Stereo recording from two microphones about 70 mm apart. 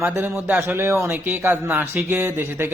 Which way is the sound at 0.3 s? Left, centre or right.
Right.